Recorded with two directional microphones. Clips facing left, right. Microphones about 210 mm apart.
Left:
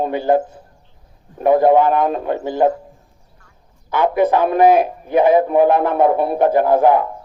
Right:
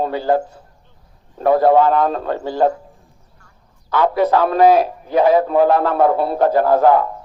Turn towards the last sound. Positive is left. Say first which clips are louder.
# even
turn(degrees=15)  # may be behind; listen again after turning